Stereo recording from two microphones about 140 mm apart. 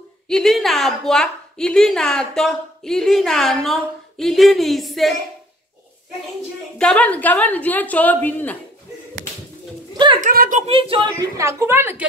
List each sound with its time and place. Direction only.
0.3 s a woman's voice: centre (ahead or behind)
6.8 s a woman's voice: 10° left (ahead or behind)
10.2 s speech: 75° right (ahead or behind)
10.7 s a woman's voice: 40° right (ahead or behind); by 12.1 s 15° right (ahead or behind)